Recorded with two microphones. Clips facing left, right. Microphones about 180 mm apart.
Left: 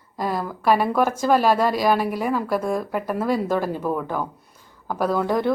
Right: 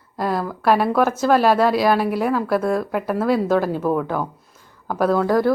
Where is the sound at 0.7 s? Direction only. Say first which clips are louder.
Right 2 dB; 10° left (ahead or behind).